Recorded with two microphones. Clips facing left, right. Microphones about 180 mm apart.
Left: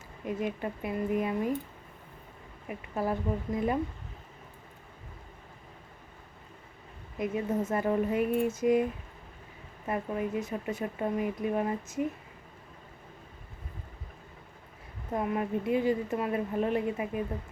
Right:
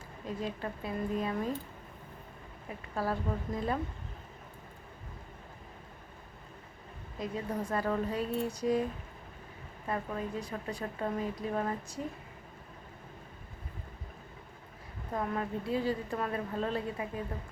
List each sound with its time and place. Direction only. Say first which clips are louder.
0.3 s speech: left 4 dB; 15° left (ahead or behind)
2.6 s speech: left 3 dB; 20° left (ahead or behind)
7.2 s speech: left 5 dB; 20° left (ahead or behind)
15.1 s speech: left 4 dB; 15° left (ahead or behind)